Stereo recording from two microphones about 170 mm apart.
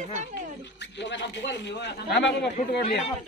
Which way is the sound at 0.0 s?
45° right (ahead or behind).